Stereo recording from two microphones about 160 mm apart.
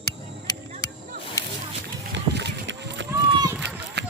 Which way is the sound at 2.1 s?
90° right.